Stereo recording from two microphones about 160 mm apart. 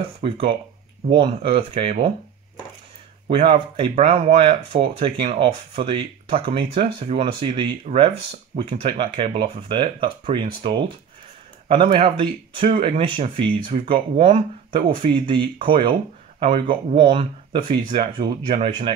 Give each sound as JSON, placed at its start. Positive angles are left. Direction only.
{"t": 0.2, "sound": "speech", "side_deg": -35}
{"t": 3.3, "sound": "speech", "side_deg": -35}